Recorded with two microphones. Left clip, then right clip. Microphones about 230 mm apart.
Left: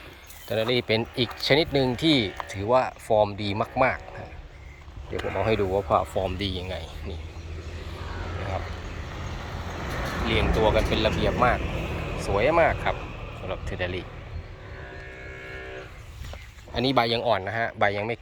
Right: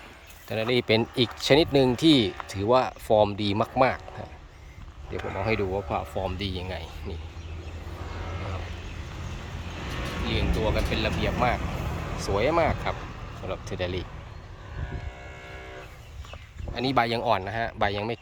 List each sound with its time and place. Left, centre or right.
0.4 s speech: centre
5.2 s speech: centre
8.8 s vehicle: left
10.2 s speech: centre; by 14.0 s right
16.7 s speech: centre